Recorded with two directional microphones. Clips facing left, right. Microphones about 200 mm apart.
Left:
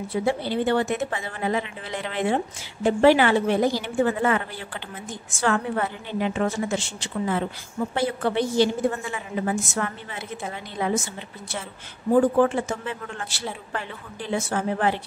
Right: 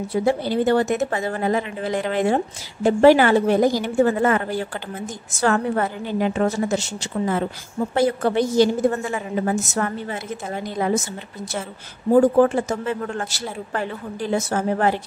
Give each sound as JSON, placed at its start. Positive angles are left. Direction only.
{"t": 0.1, "sound": "a woman's voice", "side_deg": -40}
{"t": 12.1, "sound": "speech", "side_deg": -40}